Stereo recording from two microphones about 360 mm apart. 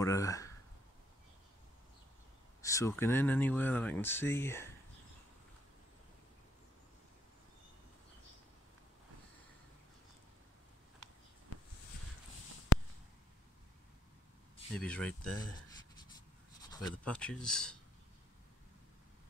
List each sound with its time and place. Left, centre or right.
0.0 s speech: centre
2.6 s speech: centre
12.7 s a sound: left
14.8 s speech: centre
16.7 s speech: centre